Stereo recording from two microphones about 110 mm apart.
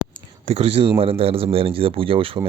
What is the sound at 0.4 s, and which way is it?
Speech, 70° right (ahead or behind).